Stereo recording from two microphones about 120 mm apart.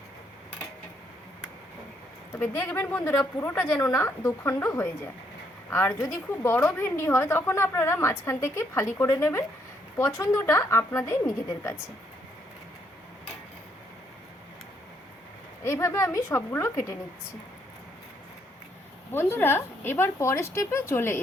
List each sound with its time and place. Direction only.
2.3 s a woman's voice: 20° left (ahead or behind)
5.7 s a woman's voice: 20° left (ahead or behind)
15.6 s a woman's voice: 25° left (ahead or behind)
19.1 s a woman's voice: 20° left (ahead or behind)